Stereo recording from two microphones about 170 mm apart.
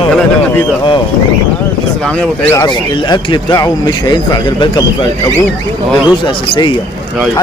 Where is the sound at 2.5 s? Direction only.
25° left (ahead or behind).